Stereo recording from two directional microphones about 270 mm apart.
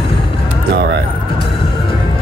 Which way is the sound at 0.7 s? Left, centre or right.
Right.